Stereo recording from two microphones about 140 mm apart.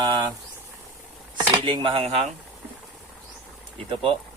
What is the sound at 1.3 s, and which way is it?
Speech, 35° right (ahead or behind).